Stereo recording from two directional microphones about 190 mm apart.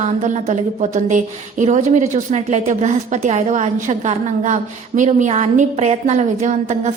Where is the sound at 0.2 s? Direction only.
40° right (ahead or behind).